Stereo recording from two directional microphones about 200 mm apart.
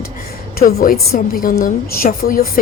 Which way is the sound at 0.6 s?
45° left (ahead or behind).